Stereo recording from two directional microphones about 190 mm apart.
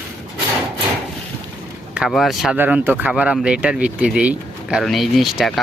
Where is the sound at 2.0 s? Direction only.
Centre (ahead or behind).